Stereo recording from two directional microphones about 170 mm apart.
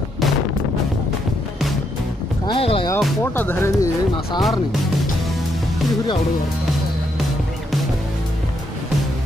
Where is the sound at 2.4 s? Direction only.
30° left (ahead or behind).